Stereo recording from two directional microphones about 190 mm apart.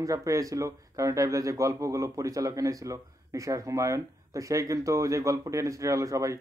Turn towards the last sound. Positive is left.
turn(degrees=-15)  # may be behind; listen again after turning